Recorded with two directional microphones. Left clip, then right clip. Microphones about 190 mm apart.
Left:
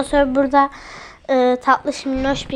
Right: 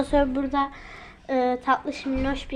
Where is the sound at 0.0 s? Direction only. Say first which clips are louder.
Left 6 dB; 5° left (ahead or behind).